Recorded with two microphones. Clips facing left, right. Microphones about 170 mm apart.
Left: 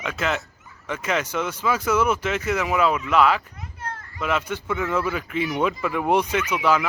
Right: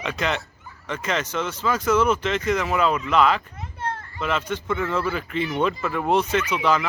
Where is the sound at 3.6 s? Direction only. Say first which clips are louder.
Right 5 dB; 30° right (ahead or behind).